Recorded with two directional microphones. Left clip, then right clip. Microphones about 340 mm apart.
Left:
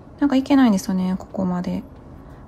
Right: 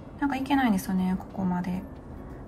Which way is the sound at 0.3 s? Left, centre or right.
Centre.